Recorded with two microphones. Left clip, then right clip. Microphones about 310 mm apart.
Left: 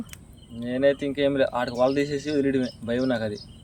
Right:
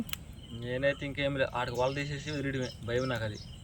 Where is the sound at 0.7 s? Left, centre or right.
Left.